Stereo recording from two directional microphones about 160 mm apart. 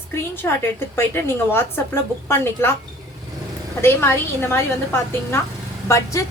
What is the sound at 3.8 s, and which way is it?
A woman's voice, 15° left (ahead or behind).